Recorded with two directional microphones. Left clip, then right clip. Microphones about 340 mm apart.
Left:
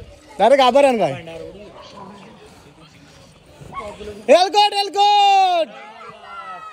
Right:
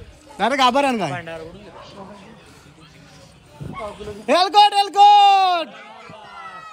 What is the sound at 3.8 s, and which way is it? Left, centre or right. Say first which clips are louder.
Speech: left 1 dB; centre.